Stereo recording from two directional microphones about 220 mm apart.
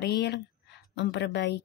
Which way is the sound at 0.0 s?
50° left (ahead or behind).